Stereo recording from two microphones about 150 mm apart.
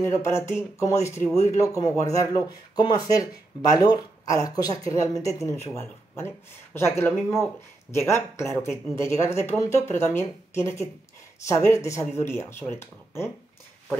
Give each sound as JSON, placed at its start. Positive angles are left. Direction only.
{"t": 0.0, "sound": "speech", "side_deg": 15}